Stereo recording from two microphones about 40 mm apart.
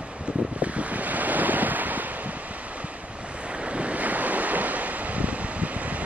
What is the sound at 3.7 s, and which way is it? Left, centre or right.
Waves, right.